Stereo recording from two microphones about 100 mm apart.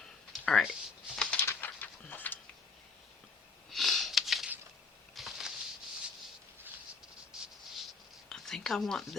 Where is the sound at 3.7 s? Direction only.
Centre (ahead or behind).